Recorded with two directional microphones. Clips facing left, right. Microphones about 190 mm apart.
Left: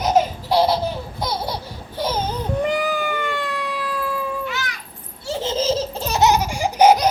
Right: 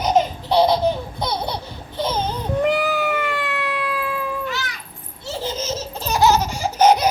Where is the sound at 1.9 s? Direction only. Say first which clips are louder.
Even; 10° left (ahead or behind).